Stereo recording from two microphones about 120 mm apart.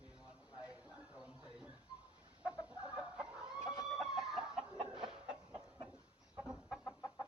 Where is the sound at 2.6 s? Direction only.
10° right (ahead or behind).